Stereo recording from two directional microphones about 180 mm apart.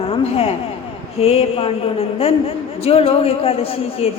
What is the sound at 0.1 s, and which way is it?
A woman's voice, 30° left (ahead or behind).